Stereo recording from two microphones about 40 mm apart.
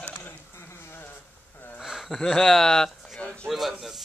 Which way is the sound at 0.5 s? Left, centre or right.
Left.